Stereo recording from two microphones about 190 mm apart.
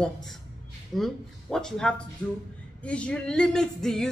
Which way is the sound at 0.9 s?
Centre (ahead or behind).